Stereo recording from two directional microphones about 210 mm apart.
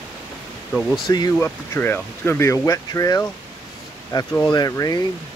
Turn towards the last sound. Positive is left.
turn(degrees=15)  # may be behind; listen again after turning